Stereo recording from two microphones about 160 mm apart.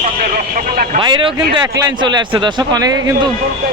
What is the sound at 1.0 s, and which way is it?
A man's voice, 30° right (ahead or behind).